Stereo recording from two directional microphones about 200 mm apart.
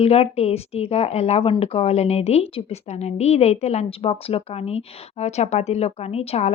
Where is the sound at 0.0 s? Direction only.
30° left (ahead or behind).